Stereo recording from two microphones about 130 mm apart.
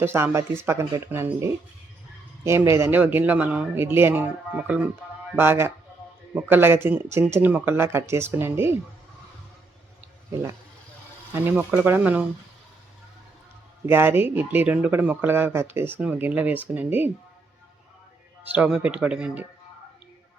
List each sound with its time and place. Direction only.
0.0 s speech: 20° right (ahead or behind)
11.3 s speech: 20° right (ahead or behind)
13.8 s speech: 15° right (ahead or behind)
18.5 s speech: 10° right (ahead or behind)